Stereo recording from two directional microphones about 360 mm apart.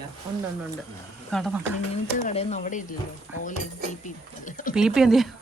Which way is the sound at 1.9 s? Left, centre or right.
Centre.